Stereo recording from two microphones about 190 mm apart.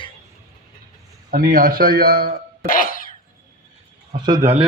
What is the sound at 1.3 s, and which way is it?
A man's voice, 50° right (ahead or behind).